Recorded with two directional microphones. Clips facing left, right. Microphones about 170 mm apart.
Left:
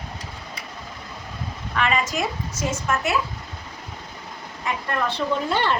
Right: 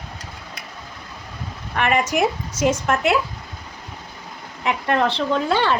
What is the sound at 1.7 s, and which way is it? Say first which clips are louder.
Speech: right 4 dB; 55° right (ahead or behind).